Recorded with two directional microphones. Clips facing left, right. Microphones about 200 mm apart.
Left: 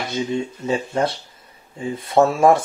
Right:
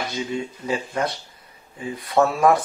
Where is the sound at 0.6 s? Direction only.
30° left (ahead or behind).